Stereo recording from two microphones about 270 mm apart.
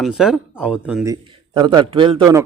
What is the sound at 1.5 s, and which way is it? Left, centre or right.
Speech, centre.